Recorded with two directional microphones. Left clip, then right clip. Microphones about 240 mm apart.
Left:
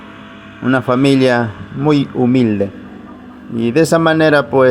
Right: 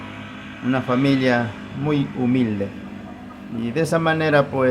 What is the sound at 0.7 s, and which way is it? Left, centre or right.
Speech, left.